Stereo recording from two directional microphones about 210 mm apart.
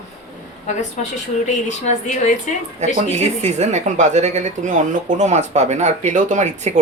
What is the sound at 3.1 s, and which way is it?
Speech, 35° right (ahead or behind).